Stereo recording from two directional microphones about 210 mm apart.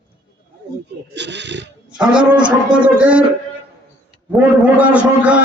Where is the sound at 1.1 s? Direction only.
55° right (ahead or behind).